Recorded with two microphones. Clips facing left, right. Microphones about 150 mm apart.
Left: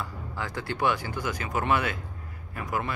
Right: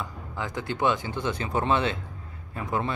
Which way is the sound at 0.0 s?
20° right (ahead or behind).